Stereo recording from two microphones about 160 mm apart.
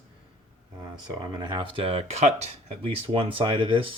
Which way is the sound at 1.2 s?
30° right (ahead or behind).